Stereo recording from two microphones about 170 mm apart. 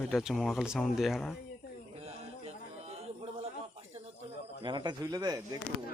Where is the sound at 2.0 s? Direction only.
40° right (ahead or behind).